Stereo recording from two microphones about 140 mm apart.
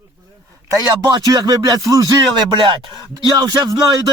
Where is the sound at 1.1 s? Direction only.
25° right (ahead or behind).